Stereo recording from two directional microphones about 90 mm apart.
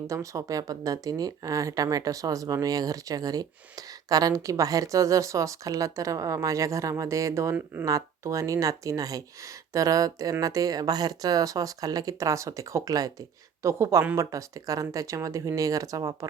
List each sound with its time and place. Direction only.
0.1 s speech: 40° right (ahead or behind)